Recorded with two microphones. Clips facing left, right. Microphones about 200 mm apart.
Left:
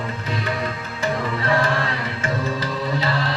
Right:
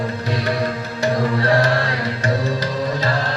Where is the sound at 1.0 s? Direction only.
40° right (ahead or behind).